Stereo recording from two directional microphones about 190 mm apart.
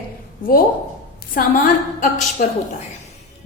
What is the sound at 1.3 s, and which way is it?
A woman's voice, 45° left (ahead or behind).